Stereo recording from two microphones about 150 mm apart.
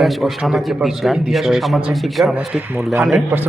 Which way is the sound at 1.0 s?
Centre (ahead or behind).